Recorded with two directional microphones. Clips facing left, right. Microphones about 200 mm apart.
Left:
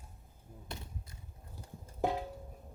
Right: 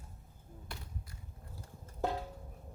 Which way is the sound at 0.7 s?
20° left (ahead or behind).